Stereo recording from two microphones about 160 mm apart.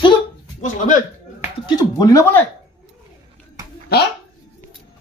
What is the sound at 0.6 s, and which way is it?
Speech, 55° left (ahead or behind).